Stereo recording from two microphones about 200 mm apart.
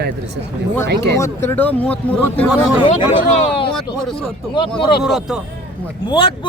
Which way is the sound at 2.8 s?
25° left (ahead or behind).